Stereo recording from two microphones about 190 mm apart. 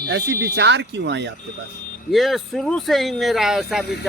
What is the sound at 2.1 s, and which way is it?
Speech, centre (ahead or behind).